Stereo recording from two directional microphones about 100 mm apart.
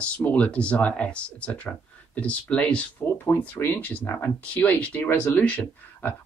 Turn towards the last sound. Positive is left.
turn(degrees=15)  # may be behind; listen again after turning